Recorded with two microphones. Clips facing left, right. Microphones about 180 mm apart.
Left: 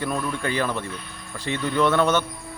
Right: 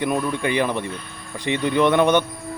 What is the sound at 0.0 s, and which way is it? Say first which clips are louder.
Speech: right 4 dB; 15° right (ahead or behind).